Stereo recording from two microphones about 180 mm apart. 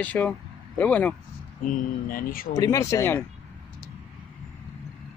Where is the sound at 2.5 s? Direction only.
20° left (ahead or behind).